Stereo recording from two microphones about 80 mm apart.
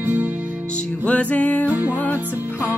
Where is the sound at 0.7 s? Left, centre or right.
Centre.